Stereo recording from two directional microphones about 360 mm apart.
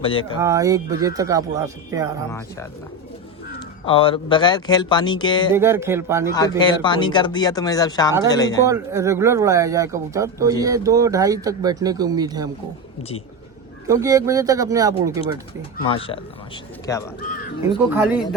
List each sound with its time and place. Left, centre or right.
0.0 s speech: centre
0.4 s speech: centre
3.8 s speech: centre
5.5 s speech: centre
6.6 s speech: centre
8.6 s speech: centre
13.0 s speech: centre
13.8 s speech: centre
15.8 s speech: centre
17.2 s speech: left